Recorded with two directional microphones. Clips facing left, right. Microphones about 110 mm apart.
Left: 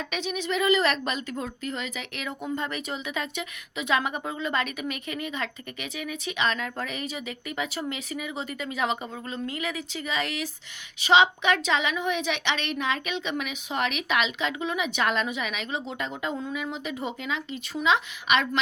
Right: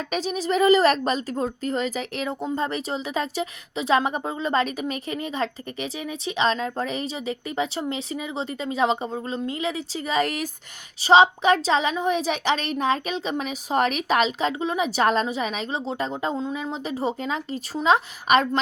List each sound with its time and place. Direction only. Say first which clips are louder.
0.0 s a woman's voice: right 4 dB; 40° right (ahead or behind)